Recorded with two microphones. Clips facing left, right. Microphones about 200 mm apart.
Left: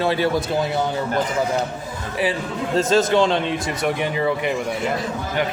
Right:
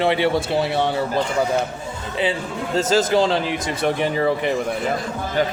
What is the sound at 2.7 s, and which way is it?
A man's voice, 25° right (ahead or behind).